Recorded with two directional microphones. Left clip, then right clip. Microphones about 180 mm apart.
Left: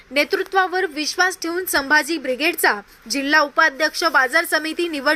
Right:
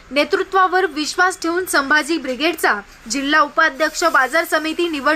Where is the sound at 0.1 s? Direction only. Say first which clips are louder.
Right 2 dB; 15° left (ahead or behind).